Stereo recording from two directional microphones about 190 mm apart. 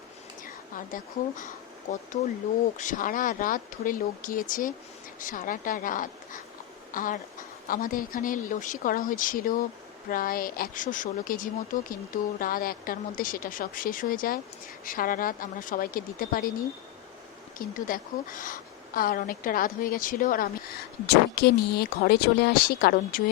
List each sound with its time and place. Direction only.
0.4 s a woman's voice: 45° left (ahead or behind)
2.7 s a woman's voice: 45° left (ahead or behind)
17.6 s a woman's voice: 45° left (ahead or behind)